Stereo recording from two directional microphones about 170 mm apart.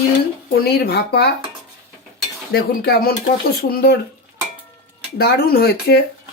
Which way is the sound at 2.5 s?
65° left (ahead or behind).